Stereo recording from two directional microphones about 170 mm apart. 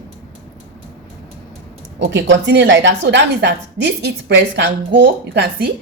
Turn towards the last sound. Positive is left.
turn(degrees=-80)